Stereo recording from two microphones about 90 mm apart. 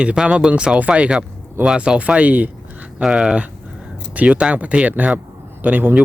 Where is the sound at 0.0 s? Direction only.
10° right (ahead or behind).